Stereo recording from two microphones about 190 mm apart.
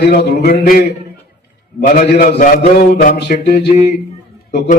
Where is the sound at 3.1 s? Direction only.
60° left (ahead or behind).